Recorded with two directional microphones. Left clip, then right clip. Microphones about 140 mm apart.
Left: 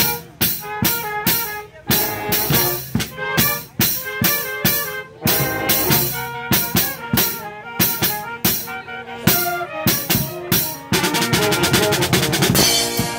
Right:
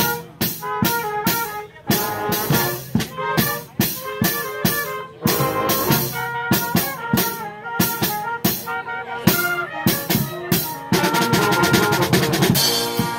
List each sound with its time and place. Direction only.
0.0 s music: 45° right (ahead or behind)